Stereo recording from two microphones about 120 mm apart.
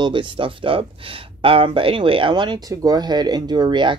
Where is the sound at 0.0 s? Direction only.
45° right (ahead or behind).